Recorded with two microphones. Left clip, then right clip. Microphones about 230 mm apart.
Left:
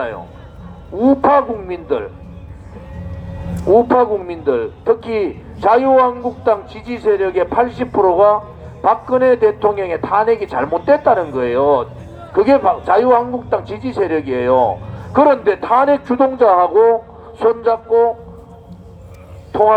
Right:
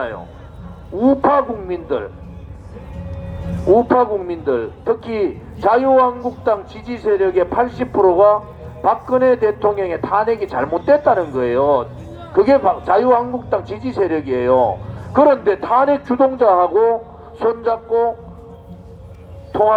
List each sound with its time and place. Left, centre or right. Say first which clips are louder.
0.9 s a man's voice: left 2 dB; left
3.7 s a man's voice: left 2 dB; left
19.5 s a man's voice: left 2 dB; left